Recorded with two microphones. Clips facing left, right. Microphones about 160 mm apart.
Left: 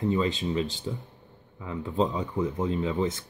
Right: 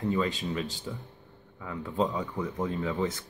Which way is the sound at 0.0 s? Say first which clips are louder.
Left 3 dB; 20° left (ahead or behind).